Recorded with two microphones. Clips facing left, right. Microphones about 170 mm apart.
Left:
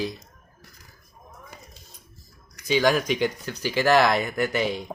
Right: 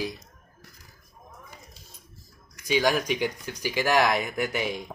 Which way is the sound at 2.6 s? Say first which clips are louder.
Left 3 dB; 10° right (ahead or behind).